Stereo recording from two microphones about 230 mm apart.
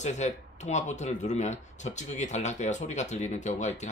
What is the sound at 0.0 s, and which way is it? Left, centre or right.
Speech, left.